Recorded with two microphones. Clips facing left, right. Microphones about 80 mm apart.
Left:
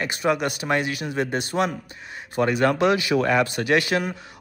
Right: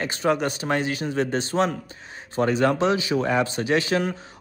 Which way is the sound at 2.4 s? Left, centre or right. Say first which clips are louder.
Left 1 dB; left.